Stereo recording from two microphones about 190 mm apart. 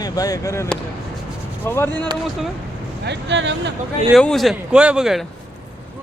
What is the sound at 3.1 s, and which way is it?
Speech, 70° right (ahead or behind).